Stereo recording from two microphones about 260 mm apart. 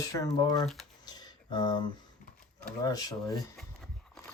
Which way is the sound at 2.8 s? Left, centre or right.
Centre.